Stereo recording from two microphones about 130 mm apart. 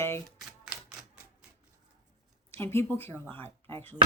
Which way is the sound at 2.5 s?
20° left (ahead or behind).